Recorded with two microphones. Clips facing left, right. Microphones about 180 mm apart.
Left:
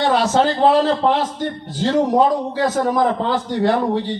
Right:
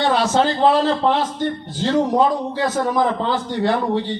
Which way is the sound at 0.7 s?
10° left (ahead or behind).